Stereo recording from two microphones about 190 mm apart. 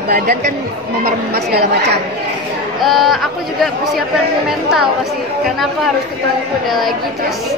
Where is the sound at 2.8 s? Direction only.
Centre (ahead or behind).